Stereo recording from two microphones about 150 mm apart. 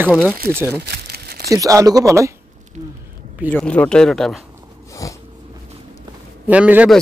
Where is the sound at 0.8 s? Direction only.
90° right.